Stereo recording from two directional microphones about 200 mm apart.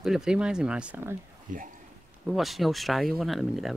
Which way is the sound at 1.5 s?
40° right (ahead or behind).